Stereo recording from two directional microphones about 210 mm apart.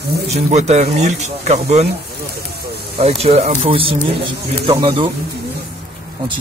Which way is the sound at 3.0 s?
30° right (ahead or behind).